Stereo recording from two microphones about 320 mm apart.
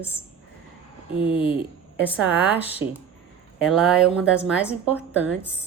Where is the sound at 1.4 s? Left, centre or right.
Centre.